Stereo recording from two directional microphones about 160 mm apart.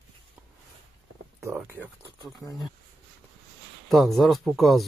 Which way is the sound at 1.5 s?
15° right (ahead or behind).